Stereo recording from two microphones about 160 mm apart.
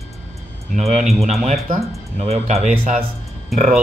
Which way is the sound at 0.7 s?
45° right (ahead or behind).